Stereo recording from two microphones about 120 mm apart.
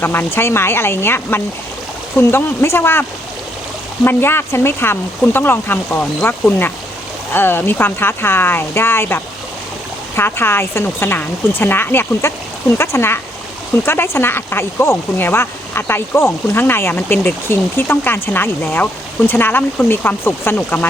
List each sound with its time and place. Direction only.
0.0 s speech: 20° left (ahead or behind)